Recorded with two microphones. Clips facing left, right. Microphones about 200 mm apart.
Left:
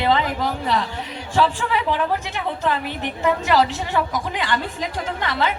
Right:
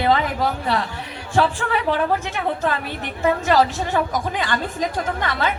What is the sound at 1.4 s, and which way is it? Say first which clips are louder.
Speech: even; 55° right (ahead or behind).